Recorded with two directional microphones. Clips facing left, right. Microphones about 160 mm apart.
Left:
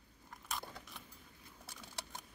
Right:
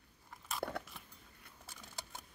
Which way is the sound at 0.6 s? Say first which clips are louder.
Right 9 dB; 70° right (ahead or behind).